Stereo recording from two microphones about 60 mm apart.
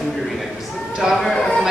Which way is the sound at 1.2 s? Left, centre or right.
Centre.